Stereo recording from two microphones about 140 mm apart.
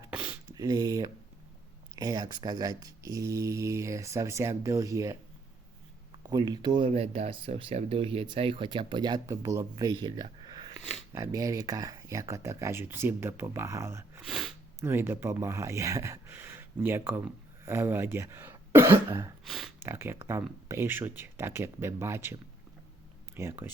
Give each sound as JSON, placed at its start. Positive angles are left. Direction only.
{"t": 0.1, "sound": "speech", "side_deg": -10}
{"t": 0.5, "sound": "speech", "side_deg": -25}
{"t": 14.2, "sound": "sneeze", "side_deg": 0}
{"t": 14.8, "sound": "speech", "side_deg": -15}
{"t": 19.5, "sound": "speech", "side_deg": 0}
{"t": 19.8, "sound": "speech", "side_deg": -15}